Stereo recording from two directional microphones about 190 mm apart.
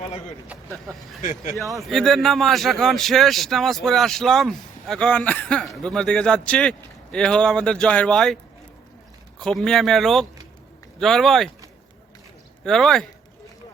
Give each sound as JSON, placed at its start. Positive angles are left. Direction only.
{"t": 0.4, "sound": "a man's voice", "side_deg": -5}
{"t": 1.2, "sound": "speech", "side_deg": 45}
{"t": 1.8, "sound": "a man's voice", "side_deg": 0}
{"t": 9.4, "sound": "a man's voice", "side_deg": 0}
{"t": 12.6, "sound": "a man's voice", "side_deg": 0}